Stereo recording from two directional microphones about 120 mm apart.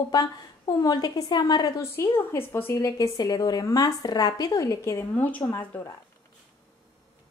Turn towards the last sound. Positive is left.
turn(degrees=25)  # may be behind; listen again after turning